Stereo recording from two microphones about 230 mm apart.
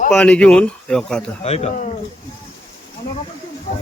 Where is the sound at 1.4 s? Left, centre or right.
Left.